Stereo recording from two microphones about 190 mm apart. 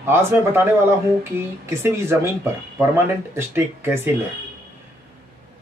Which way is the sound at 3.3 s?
15° right (ahead or behind).